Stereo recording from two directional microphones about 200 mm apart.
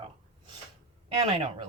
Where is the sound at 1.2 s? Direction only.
30° right (ahead or behind).